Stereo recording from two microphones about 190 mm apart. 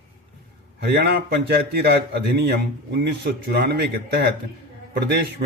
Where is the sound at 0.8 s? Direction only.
60° right (ahead or behind).